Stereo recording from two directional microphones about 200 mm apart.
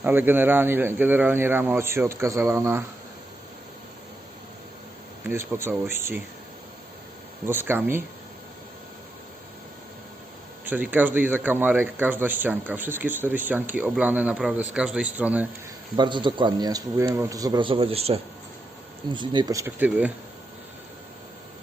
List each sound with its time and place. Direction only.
0.0 s speech: 10° right (ahead or behind)
5.2 s speech: 10° right (ahead or behind)
7.4 s speech: 10° right (ahead or behind)
10.7 s speech: 10° right (ahead or behind)
16.0 s speech: 25° right (ahead or behind); by 20.1 s 10° right (ahead or behind)